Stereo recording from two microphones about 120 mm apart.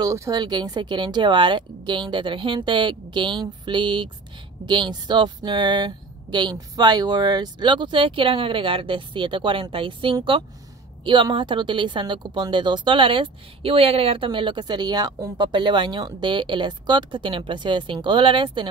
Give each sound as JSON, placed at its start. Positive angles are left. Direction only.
{"t": 0.0, "sound": "speech", "side_deg": -30}